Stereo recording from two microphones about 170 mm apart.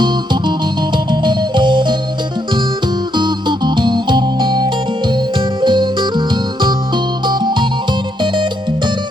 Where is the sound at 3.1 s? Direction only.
25° right (ahead or behind).